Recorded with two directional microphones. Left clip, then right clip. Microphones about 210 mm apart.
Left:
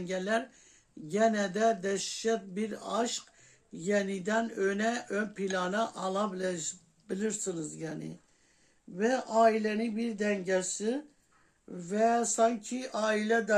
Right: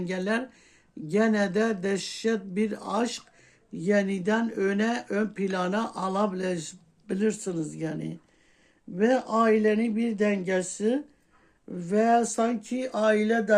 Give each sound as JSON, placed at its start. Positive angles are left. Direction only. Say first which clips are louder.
{"t": 0.0, "sound": "speech", "louder": "right 2 dB", "side_deg": -40}